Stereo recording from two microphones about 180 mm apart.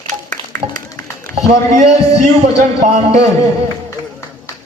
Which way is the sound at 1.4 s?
40° right (ahead or behind).